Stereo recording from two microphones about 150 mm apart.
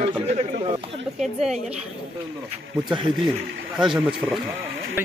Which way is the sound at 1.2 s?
Centre (ahead or behind).